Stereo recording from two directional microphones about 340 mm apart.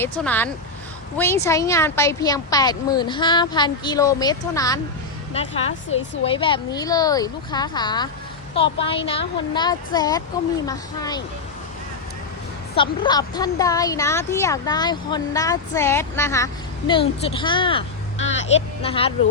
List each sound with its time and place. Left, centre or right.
0.0 s speech: centre
12.7 s a woman's voice: centre